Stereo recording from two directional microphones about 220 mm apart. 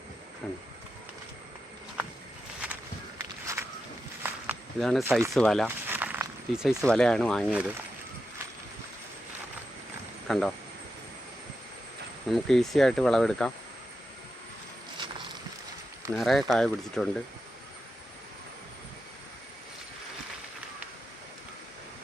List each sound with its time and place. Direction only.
0.4 s speech: 5° left (ahead or behind)
3.2 s walk: 15° right (ahead or behind)
4.8 s speech: centre (ahead or behind)
5.0 s speech: 10° right (ahead or behind)
5.3 s speech: centre (ahead or behind)
5.6 s speech: 10° right (ahead or behind)
10.2 s speech: centre (ahead or behind)
12.3 s speech: centre (ahead or behind)
14.9 s a sound: 20° right (ahead or behind)
16.1 s speech: centre (ahead or behind)